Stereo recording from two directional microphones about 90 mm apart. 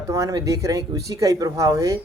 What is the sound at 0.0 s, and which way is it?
Speech, 40° right (ahead or behind).